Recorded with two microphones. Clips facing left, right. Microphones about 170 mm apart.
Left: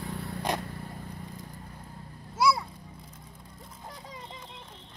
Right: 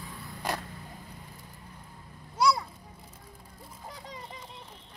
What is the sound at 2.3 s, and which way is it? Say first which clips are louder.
Children playing: even; 5° left (ahead or behind).